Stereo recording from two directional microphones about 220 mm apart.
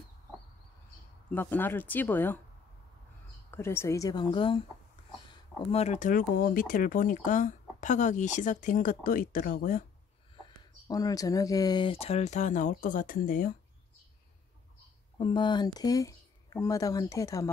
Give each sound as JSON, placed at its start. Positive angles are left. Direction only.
{"t": 1.3, "sound": "speech", "side_deg": 10}
{"t": 3.5, "sound": "speech", "side_deg": 10}
{"t": 10.4, "sound": "speech", "side_deg": 15}
{"t": 15.1, "sound": "speech", "side_deg": 20}